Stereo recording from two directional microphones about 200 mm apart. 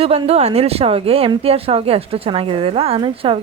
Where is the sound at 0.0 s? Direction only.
30° right (ahead or behind).